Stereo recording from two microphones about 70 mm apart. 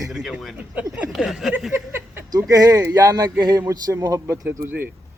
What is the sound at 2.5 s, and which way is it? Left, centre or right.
Speech, right.